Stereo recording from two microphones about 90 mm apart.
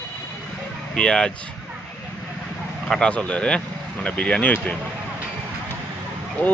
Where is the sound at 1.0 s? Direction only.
10° left (ahead or behind).